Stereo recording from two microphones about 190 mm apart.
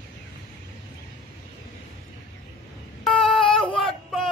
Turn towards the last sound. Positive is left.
turn(degrees=0)  # may be behind; listen again after turning